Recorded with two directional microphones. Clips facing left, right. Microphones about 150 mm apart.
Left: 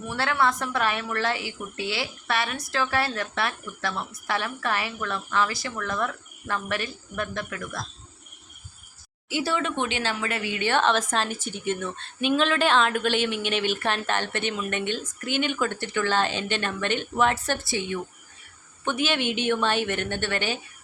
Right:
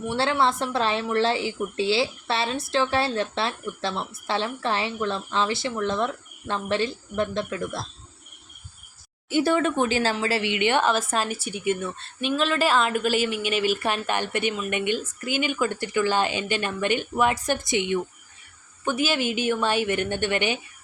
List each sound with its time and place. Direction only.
0.1 s speech: 25° right (ahead or behind)
9.3 s speech: 50° right (ahead or behind); by 18.0 s 20° right (ahead or behind)
18.9 s speech: 5° right (ahead or behind)